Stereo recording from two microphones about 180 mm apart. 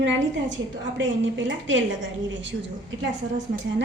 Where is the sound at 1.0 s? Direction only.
90° right.